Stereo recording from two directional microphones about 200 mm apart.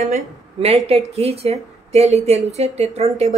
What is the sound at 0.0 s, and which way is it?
A woman's voice, 35° right (ahead or behind).